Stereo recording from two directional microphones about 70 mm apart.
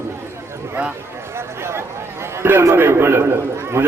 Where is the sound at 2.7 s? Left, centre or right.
Right.